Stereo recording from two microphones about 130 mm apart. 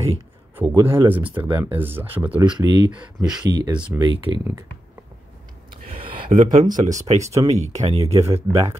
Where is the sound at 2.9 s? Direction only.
5° right (ahead or behind).